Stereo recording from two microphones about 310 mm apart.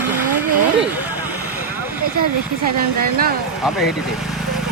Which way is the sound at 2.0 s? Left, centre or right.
Right.